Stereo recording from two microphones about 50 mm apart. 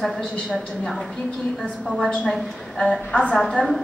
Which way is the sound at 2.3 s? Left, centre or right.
Centre.